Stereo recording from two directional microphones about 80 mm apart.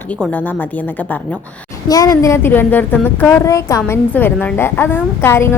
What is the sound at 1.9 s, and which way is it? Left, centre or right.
Speech, left.